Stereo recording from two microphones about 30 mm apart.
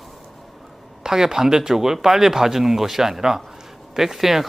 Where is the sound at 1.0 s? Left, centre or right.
Centre.